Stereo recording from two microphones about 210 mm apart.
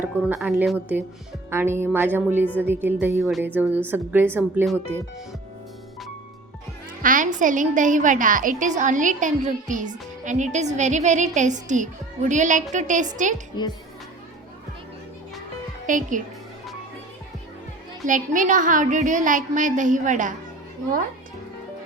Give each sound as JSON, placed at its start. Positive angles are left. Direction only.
{"t": 0.0, "sound": "speech", "side_deg": -5}
{"t": 7.0, "sound": "a woman's voice", "side_deg": -40}
{"t": 15.9, "sound": "a woman's voice", "side_deg": -40}
{"t": 18.0, "sound": "a woman's voice", "side_deg": -40}